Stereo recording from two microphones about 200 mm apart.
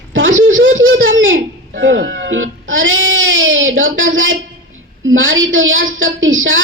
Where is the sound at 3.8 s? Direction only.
70° right (ahead or behind).